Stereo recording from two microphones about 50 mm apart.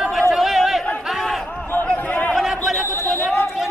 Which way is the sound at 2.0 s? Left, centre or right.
Left.